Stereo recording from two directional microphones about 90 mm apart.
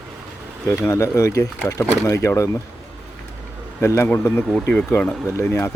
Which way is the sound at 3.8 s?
30° left (ahead or behind).